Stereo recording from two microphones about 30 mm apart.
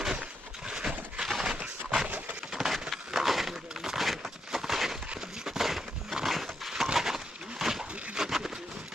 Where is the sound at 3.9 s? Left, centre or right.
Centre.